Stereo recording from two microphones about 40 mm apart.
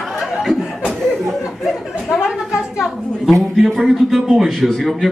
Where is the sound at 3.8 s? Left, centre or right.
Centre.